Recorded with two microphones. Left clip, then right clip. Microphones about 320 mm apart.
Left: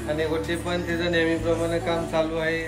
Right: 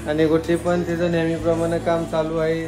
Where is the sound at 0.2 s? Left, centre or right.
Centre.